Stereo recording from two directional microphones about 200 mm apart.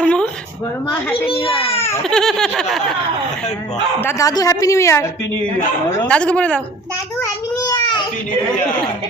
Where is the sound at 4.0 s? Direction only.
15° left (ahead or behind).